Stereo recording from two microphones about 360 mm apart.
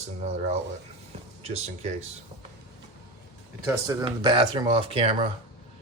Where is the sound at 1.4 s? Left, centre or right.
Centre.